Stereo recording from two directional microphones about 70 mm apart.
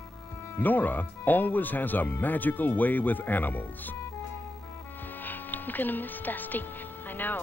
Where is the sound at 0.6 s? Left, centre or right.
Left.